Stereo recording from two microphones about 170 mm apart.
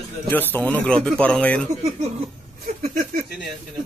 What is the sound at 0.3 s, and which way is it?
Speech, 10° left (ahead or behind).